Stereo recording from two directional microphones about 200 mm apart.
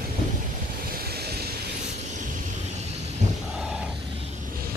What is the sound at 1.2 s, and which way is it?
Vehicle, 55° right (ahead or behind).